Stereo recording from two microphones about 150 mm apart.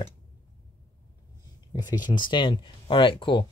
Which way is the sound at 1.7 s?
30° left (ahead or behind).